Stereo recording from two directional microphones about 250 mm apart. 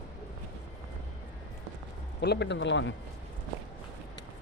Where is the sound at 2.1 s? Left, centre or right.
Left.